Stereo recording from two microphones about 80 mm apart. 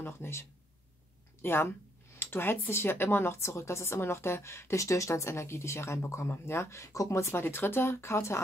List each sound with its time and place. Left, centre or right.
0.0 s speech: left